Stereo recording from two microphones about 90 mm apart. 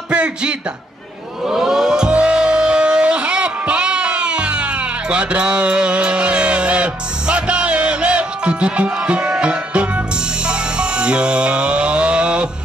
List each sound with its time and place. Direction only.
0.1 s speech: 10° right (ahead or behind)
1.5 s music: 5° right (ahead or behind)